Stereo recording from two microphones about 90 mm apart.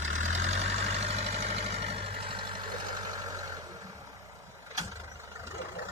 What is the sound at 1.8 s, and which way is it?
Vehicle, 90° right.